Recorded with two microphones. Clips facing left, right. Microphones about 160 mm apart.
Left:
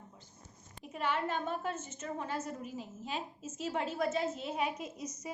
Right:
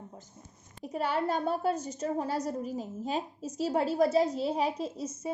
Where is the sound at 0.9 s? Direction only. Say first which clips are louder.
Right 5 dB; 40° right (ahead or behind).